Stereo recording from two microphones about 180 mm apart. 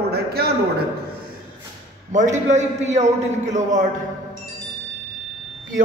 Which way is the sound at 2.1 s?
40° right (ahead or behind).